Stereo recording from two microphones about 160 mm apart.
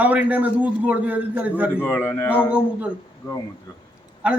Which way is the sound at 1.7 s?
15° left (ahead or behind).